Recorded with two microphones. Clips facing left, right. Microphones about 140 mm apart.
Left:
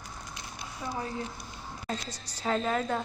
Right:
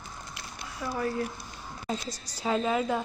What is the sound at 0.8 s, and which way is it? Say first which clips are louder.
Speech: right 5 dB; 20° left (ahead or behind).